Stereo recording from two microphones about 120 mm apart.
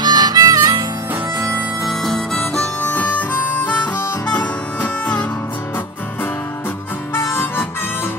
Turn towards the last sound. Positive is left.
turn(degrees=20)  # may be behind; listen again after turning